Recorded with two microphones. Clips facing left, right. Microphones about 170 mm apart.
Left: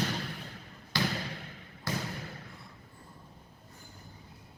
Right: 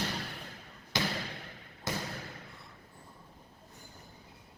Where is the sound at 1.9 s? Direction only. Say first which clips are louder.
Left 1 dB; 20° right (ahead or behind).